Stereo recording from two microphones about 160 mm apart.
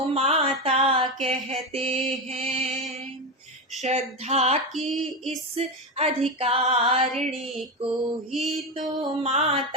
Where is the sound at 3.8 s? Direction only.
45° right (ahead or behind).